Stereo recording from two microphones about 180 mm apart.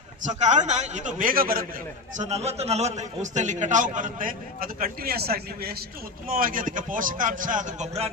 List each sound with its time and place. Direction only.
0.3 s a man's voice: 40° right (ahead or behind)
2.1 s a man's voice: 40° right (ahead or behind)